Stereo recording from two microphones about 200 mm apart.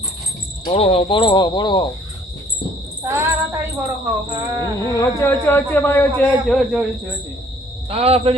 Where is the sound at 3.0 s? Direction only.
15° right (ahead or behind).